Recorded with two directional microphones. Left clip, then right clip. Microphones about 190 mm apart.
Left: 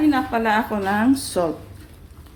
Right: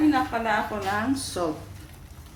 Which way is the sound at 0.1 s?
45° left (ahead or behind).